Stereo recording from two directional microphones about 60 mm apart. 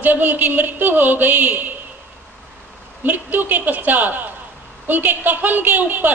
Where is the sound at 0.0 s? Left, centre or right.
Right.